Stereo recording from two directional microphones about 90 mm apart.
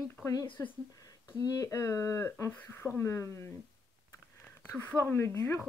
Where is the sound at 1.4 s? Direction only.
40° left (ahead or behind).